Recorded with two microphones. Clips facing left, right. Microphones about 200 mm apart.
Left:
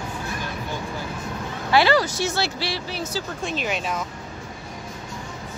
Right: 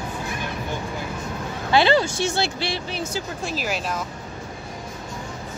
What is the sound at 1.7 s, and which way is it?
Speech, 25° right (ahead or behind).